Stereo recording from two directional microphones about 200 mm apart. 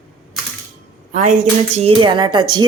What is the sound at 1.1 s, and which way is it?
Speech, 40° right (ahead or behind).